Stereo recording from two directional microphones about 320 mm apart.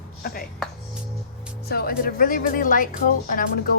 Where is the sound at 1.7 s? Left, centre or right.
Left.